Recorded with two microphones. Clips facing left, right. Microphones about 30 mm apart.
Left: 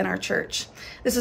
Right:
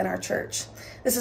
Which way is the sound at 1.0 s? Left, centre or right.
Left.